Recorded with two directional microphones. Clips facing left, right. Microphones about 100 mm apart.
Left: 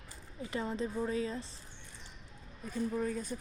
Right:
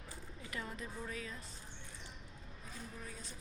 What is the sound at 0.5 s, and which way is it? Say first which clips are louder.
Speech: left 10 dB; 25° left (ahead or behind).